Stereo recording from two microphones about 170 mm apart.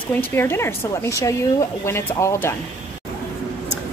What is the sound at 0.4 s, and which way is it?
A woman's voice, 15° left (ahead or behind).